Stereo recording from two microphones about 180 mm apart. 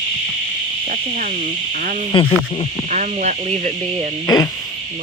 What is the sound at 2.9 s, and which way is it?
Speech, 40° right (ahead or behind).